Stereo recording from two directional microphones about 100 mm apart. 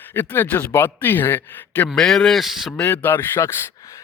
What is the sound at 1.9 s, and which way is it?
Speech, 5° left (ahead or behind).